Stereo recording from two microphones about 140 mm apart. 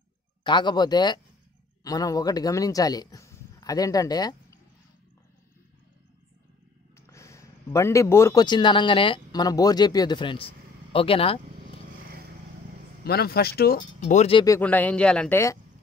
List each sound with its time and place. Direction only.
0.4 s speech: 35° left (ahead or behind)
7.0 s a sound: 20° left (ahead or behind)
8.5 s speech: 35° left (ahead or behind)
12.0 s vehicle: 90° right
13.0 s speech: 90° left; by 14.2 s 65° left (ahead or behind)
14.6 s a man's voice: 10° left (ahead or behind)